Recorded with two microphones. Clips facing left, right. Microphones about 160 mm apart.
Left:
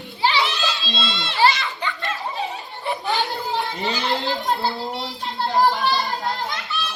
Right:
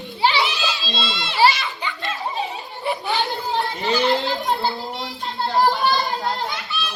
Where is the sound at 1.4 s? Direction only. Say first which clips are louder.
Right 1 dB; 15° right (ahead or behind).